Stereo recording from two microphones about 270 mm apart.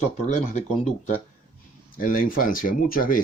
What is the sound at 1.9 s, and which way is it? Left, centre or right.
Speech, left.